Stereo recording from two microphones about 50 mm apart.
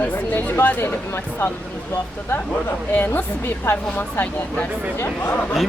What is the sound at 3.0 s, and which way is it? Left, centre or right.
Speech, left.